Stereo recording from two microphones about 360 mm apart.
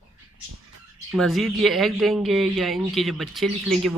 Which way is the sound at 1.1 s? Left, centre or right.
Centre.